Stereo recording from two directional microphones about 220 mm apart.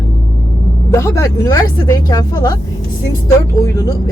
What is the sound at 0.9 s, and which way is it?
Speech, 15° left (ahead or behind).